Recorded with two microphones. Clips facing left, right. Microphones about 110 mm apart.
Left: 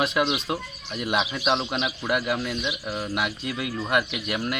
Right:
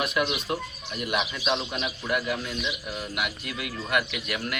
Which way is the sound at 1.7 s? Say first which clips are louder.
Left 3 dB; 90° left.